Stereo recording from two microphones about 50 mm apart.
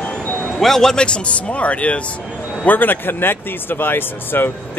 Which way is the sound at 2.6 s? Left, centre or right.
Left.